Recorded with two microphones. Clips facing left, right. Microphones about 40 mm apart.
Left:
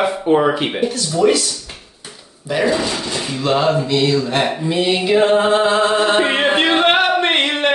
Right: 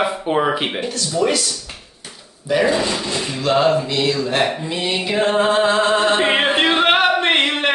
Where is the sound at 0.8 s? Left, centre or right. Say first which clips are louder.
Left 4 dB; centre.